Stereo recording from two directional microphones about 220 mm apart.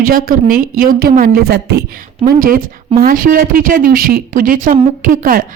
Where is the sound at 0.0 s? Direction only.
40° right (ahead or behind).